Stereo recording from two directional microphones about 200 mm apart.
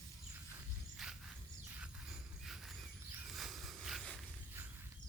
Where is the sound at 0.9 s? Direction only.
Centre (ahead or behind).